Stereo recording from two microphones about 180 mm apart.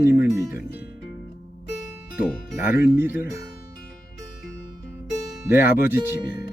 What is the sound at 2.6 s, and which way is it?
Speech, 10° right (ahead or behind).